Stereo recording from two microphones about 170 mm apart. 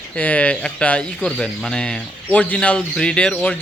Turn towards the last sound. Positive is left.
turn(degrees=5)  # may be behind; listen again after turning